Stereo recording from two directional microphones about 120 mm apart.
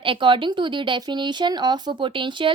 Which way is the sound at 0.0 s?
45° right (ahead or behind).